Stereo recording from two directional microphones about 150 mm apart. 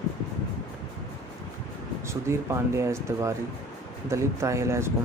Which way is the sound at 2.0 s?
20° right (ahead or behind).